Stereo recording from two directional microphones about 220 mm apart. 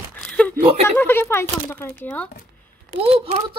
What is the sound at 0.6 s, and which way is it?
Speech, 30° right (ahead or behind).